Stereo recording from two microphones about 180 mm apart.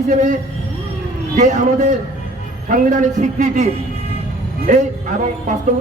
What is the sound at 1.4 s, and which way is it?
A man's voice, 40° right (ahead or behind).